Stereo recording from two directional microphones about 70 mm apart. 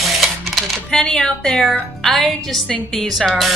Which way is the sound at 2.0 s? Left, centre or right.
Centre.